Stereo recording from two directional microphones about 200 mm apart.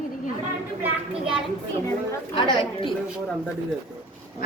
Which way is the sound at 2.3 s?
25° left (ahead or behind).